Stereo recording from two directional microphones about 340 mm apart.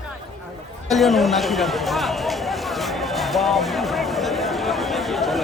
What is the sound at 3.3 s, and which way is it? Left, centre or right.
Speech, centre.